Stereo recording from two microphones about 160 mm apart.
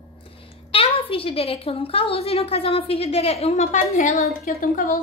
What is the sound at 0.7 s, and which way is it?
A woman's voice, 35° left (ahead or behind).